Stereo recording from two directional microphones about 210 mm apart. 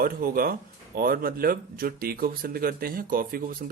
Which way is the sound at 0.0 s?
45° right (ahead or behind).